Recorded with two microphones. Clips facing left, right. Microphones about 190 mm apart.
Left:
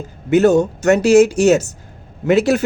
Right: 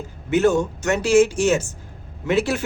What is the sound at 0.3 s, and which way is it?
Speech, 40° left (ahead or behind).